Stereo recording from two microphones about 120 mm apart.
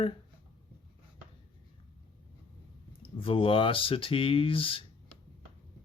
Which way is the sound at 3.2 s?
50° left (ahead or behind).